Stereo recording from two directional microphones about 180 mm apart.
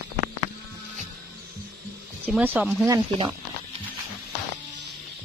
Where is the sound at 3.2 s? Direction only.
30° right (ahead or behind).